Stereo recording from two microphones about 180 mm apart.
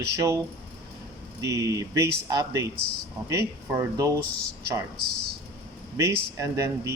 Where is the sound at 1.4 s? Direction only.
20° right (ahead or behind).